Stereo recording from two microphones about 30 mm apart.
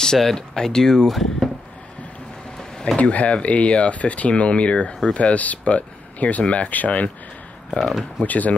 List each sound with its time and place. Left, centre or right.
0.0 s speech: centre
1.0 s speech: centre
3.0 s speech: left
4.3 s speech: left
8.2 s speech: left